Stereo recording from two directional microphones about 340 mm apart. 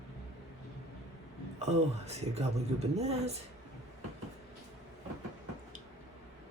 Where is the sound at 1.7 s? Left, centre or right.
Centre.